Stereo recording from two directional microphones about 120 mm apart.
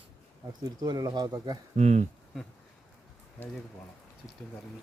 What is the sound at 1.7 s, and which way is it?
Speech, 70° right (ahead or behind).